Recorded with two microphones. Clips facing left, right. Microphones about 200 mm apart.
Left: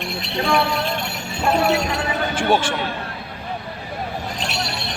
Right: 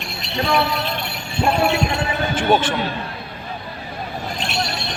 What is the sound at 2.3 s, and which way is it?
Speech, 10° left (ahead or behind).